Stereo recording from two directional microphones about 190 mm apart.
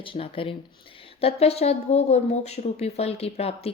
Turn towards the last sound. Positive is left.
turn(degrees=30)  # may be behind; listen again after turning